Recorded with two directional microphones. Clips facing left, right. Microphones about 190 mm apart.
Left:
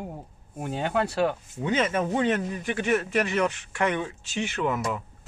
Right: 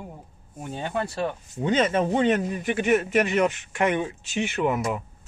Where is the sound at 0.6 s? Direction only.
85° left.